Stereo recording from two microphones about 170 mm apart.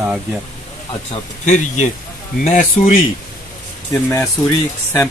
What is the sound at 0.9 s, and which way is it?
Speech, 40° left (ahead or behind).